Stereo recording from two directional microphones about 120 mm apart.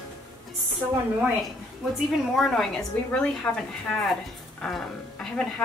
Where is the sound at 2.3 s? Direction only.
Centre (ahead or behind).